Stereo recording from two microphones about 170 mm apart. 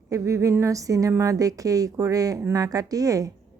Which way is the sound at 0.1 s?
20° right (ahead or behind).